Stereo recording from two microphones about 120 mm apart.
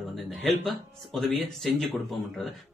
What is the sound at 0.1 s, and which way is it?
Music, centre (ahead or behind).